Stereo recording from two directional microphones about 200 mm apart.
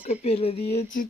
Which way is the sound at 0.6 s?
45° left (ahead or behind).